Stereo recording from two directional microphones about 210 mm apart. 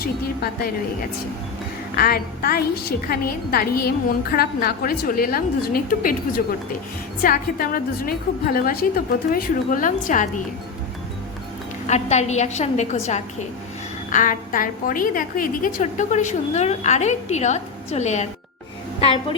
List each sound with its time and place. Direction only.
0.0 s a woman's voice: 45° left (ahead or behind)
2.0 s a woman's voice: 45° left (ahead or behind)
7.2 s a woman's voice: 45° left (ahead or behind)
11.9 s a woman's voice: 30° left (ahead or behind)
14.1 s a woman's voice: 40° left (ahead or behind)